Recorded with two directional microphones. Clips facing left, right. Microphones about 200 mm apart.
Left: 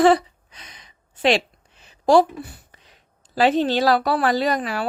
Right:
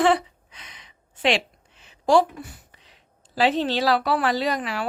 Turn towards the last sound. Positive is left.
turn(degrees=40)  # may be behind; listen again after turning